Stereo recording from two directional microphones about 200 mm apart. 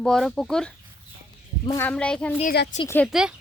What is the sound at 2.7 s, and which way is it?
Speech, 35° left (ahead or behind).